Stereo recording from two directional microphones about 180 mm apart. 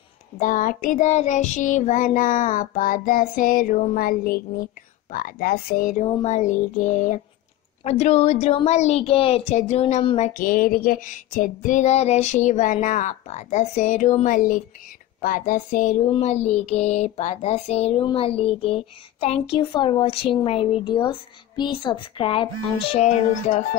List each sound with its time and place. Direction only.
0.4 s child singing: 45° left (ahead or behind)
5.1 s speech: 55° left (ahead or behind)
6.2 s child singing: 40° left (ahead or behind)
7.8 s a sound: 35° left (ahead or behind)
15.2 s child singing: 50° left (ahead or behind)
16.1 s a sound: 40° left (ahead or behind)